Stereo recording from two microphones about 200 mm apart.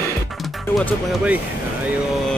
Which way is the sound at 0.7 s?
Centre (ahead or behind).